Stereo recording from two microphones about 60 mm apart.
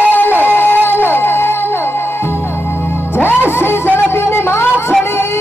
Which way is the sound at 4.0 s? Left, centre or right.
Left.